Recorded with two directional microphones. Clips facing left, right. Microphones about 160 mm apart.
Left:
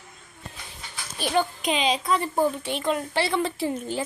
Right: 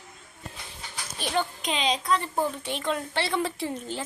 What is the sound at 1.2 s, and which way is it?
A woman's voice, 10° left (ahead or behind).